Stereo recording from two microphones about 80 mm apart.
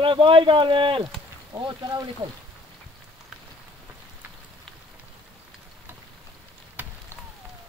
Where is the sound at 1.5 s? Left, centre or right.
Right.